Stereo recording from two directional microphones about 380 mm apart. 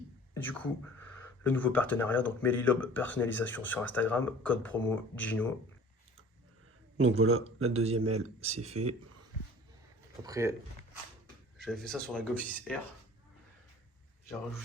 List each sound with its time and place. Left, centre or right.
0.5 s speech: centre
7.1 s speech: right
8.5 s speech: centre
10.2 s speech: centre
11.5 s speech: centre